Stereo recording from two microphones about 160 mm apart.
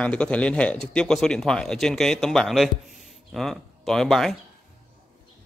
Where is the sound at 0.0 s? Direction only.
5° left (ahead or behind).